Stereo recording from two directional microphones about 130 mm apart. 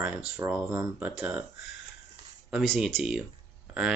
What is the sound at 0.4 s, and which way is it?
Mantra, 20° right (ahead or behind).